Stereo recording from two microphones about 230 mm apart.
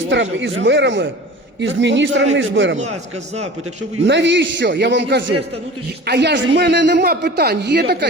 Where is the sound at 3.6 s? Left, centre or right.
Right.